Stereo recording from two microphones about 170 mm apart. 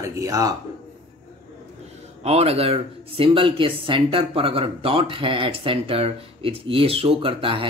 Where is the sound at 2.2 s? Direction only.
35° right (ahead or behind).